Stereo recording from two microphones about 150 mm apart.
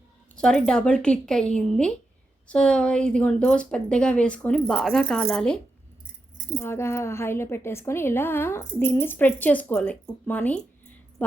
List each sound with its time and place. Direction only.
0.3 s a woman's voice: 5° left (ahead or behind)
6.6 s a woman's voice: 15° left (ahead or behind)